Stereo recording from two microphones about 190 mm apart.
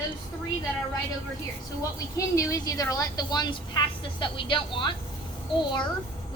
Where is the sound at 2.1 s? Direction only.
15° left (ahead or behind).